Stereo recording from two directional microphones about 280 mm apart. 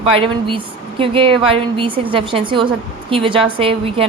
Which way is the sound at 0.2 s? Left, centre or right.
Centre.